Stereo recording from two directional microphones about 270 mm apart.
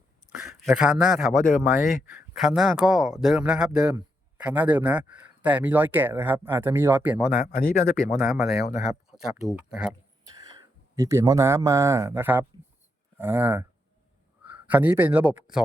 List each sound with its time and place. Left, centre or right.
0.4 s a man's voice: centre
7.3 s speech: left
8.1 s speech: centre
9.6 s speech: centre
10.9 s a man's voice: centre